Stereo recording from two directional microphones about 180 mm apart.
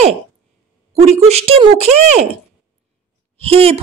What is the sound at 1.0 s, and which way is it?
Speech, 35° right (ahead or behind).